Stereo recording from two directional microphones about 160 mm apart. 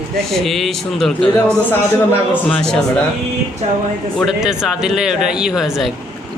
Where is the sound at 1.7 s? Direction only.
10° left (ahead or behind).